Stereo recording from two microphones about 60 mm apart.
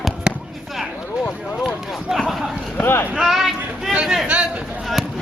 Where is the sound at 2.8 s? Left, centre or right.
Left.